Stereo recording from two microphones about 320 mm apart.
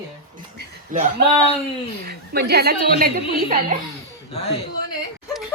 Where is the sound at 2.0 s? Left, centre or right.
Right.